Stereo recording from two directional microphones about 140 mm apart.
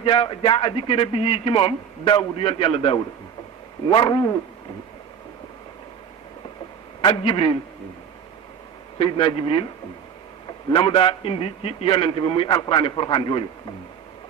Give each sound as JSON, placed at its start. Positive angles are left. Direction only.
{"t": 0.0, "sound": "a man's voice", "side_deg": 35}
{"t": 7.0, "sound": "a man's voice", "side_deg": 40}
{"t": 8.9, "sound": "a man's voice", "side_deg": 40}
{"t": 10.7, "sound": "a man's voice", "side_deg": 35}